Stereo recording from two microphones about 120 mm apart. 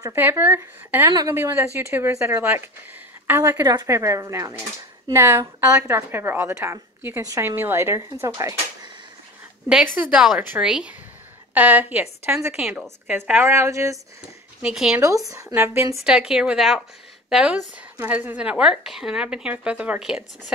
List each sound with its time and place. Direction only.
0.1 s a woman's voice: 20° right (ahead or behind)
9.9 s a woman's voice: 5° right (ahead or behind)
13.1 s a woman's voice: 15° right (ahead or behind)
14.6 s speech: 5° right (ahead or behind)
15.0 s a woman's voice: 30° right (ahead or behind)
15.5 s a woman's voice: 15° right (ahead or behind)
16.0 s a woman's voice: 5° right (ahead or behind)